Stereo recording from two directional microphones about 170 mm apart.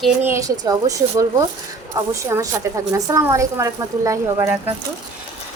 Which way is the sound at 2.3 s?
15° right (ahead or behind).